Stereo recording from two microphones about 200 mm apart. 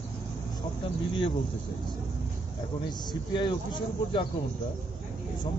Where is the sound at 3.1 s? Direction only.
20° left (ahead or behind).